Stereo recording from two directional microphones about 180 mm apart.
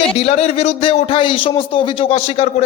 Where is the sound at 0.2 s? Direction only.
35° left (ahead or behind).